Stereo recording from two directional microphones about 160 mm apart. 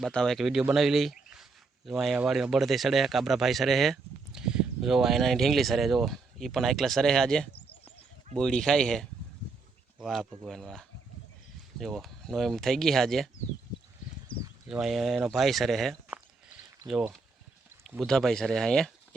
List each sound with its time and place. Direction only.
0.0 s speech: 5° left (ahead or behind)
14.3 s a sound: 30° left (ahead or behind)
14.7 s speech: centre (ahead or behind)
16.0 s walk: 10° right (ahead or behind)
18.0 s speech: centre (ahead or behind)